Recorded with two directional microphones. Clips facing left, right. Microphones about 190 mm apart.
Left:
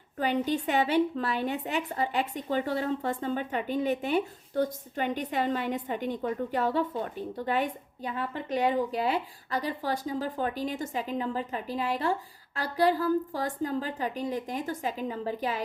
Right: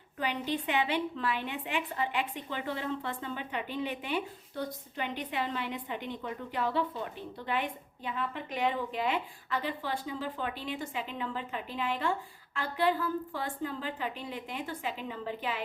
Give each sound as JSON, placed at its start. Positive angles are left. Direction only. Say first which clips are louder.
{"t": 0.2, "sound": "a woman's voice", "louder": "left 6 dB", "side_deg": 45}